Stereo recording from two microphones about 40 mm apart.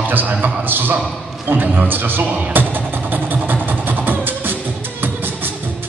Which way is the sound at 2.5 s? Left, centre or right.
Right.